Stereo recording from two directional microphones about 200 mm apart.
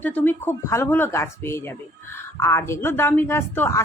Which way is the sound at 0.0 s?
10° left (ahead or behind).